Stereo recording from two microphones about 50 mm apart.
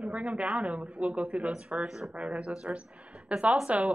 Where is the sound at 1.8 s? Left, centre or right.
Centre.